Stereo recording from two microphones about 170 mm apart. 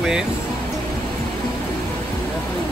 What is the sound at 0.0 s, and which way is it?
Speech, 5° right (ahead or behind).